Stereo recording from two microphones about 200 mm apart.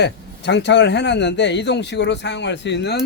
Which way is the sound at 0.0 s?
60° left (ahead or behind).